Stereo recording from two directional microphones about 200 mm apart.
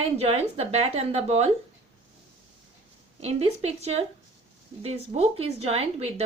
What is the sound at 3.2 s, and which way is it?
A woman's voice, 30° right (ahead or behind).